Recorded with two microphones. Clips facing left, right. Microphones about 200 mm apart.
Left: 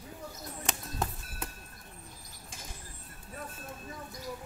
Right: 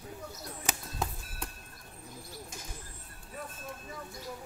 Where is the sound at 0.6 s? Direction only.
Centre (ahead or behind).